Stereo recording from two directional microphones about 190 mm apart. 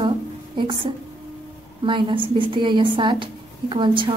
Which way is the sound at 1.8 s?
25° right (ahead or behind).